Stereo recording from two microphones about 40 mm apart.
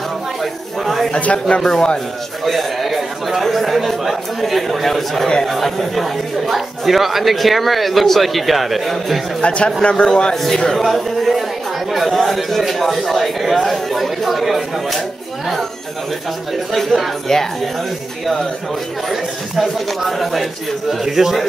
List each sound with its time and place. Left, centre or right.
0.4 s a sound: centre
1.2 s speech: left
1.6 s a man's voice: centre
2.4 s a man's voice: centre
9.4 s speech: left
10.0 s speech: centre
10.3 s speech: centre
16.7 s speech: centre
17.3 s a man's voice: centre
19.0 s speech: centre